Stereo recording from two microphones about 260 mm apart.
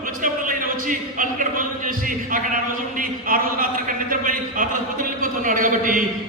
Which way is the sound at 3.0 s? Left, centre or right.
Right.